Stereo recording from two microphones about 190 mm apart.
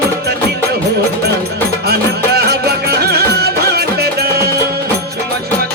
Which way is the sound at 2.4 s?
55° right (ahead or behind).